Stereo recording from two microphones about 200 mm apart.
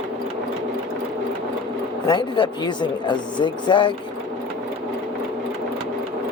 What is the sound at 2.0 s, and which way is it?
Speech, 25° left (ahead or behind).